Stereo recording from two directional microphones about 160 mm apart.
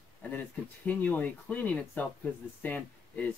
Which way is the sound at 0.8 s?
10° left (ahead or behind).